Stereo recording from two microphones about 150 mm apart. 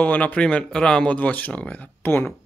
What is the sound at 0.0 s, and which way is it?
Speech, 10° left (ahead or behind).